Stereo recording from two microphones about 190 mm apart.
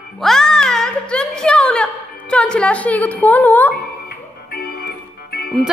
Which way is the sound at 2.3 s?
5° left (ahead or behind).